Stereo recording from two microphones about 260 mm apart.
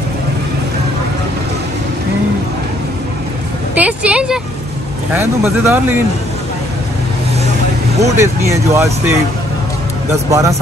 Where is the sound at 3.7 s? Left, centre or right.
Centre.